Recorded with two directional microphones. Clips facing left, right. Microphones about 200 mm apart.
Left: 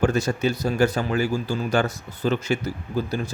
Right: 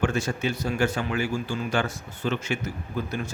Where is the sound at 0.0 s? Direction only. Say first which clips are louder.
Left 4 dB; 40° left (ahead or behind).